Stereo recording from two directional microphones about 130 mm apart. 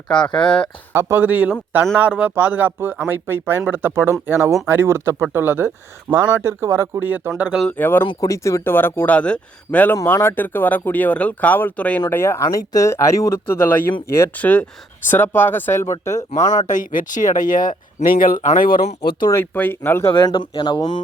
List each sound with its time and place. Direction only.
0.3 s speech: 5° left (ahead or behind)
0.9 s speech: 20° right (ahead or behind)
7.6 s speech: 10° left (ahead or behind)
8.0 s speech: 40° left (ahead or behind)
8.3 s speech: 25° left (ahead or behind)
16.6 s speech: 90° left
19.3 s speech: 15° left (ahead or behind)
20.1 s speech: 35° left (ahead or behind)